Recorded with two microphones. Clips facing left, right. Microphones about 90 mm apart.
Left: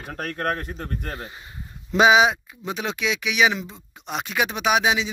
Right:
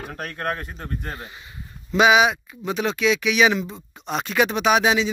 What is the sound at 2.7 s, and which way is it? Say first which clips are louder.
Speech: right 5 dB; 10° left (ahead or behind).